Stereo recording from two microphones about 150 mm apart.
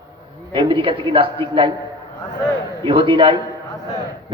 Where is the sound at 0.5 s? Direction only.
35° right (ahead or behind).